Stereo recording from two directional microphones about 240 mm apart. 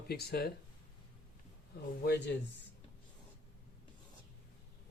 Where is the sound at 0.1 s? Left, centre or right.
Left.